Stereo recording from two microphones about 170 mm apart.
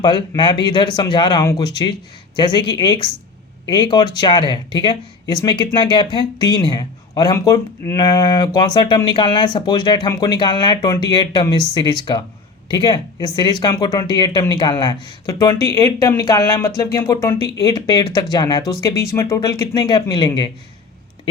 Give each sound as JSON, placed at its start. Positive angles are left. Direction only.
{"t": 0.0, "sound": "speech", "side_deg": 25}